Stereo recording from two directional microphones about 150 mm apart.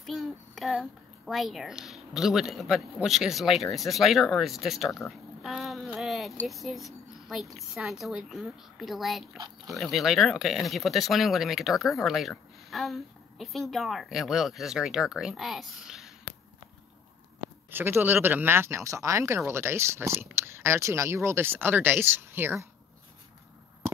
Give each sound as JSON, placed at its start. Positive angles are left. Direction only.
{"t": 0.0, "sound": "a child's voice", "side_deg": 0}
{"t": 5.0, "sound": "a sound", "side_deg": 0}
{"t": 6.4, "sound": "speech", "side_deg": 0}
{"t": 17.6, "sound": "speech", "side_deg": -15}